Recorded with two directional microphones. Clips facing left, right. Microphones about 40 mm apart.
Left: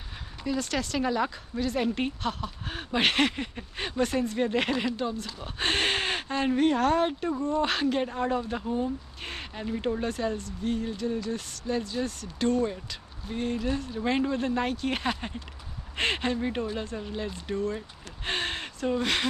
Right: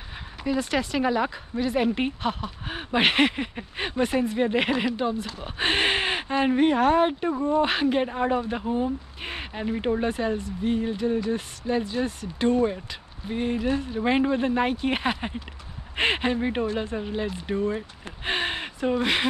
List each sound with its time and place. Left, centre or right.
0.4 s speech: centre